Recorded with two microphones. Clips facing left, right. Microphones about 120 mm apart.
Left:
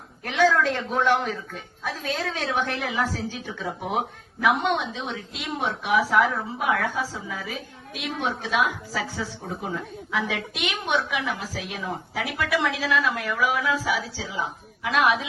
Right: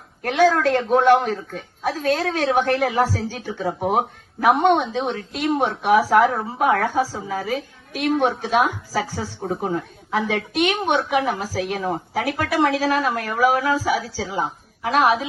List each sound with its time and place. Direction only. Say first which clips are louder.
0.2 s speech: right 4 dB; 60° right (ahead or behind); by 4.7 s 40° right (ahead or behind)
4.7 s a woman's voice: right 7 dB; 50° right (ahead or behind); by 15.3 s 35° right (ahead or behind)